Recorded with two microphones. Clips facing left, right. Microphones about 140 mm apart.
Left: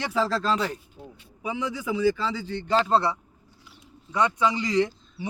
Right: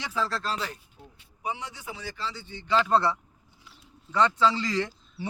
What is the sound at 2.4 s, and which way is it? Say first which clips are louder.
Speech: left 11 dB; 75° left (ahead or behind).